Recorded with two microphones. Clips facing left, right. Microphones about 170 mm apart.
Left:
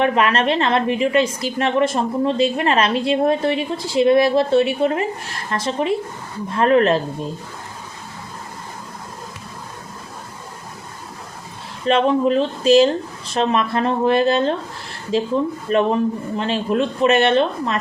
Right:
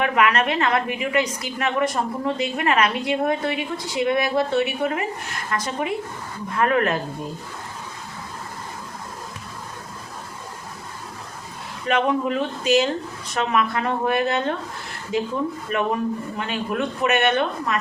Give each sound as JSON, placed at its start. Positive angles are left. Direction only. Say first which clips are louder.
{"t": 0.0, "sound": "a woman's voice", "louder": "left 3 dB", "side_deg": 30}
{"t": 11.9, "sound": "a woman's voice", "louder": "left 5 dB", "side_deg": 30}